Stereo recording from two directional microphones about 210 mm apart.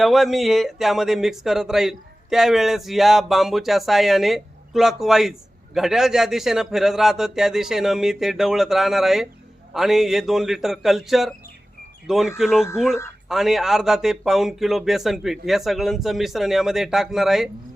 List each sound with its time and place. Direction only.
0.0 s speech: centre (ahead or behind)